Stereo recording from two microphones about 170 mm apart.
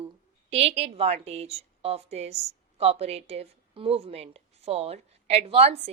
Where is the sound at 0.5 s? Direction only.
35° right (ahead or behind).